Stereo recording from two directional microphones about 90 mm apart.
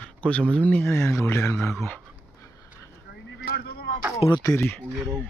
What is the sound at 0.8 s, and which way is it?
Speech, 30° left (ahead or behind).